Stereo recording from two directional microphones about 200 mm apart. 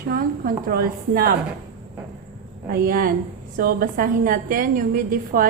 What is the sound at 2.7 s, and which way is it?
A woman's voice, 45° right (ahead or behind).